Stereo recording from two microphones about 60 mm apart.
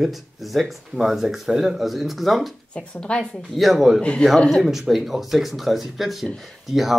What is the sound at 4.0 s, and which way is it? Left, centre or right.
Speech, centre.